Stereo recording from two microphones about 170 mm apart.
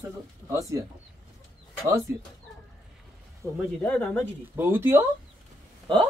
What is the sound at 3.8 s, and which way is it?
Speech, 5° left (ahead or behind).